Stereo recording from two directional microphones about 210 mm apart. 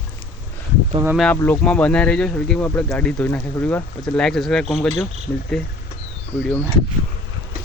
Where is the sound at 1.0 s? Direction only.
Centre (ahead or behind).